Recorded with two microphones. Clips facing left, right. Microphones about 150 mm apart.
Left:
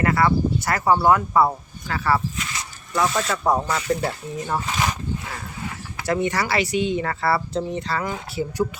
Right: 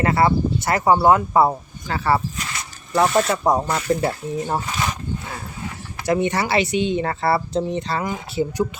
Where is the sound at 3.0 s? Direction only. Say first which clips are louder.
Right 5 dB; 55° right (ahead or behind).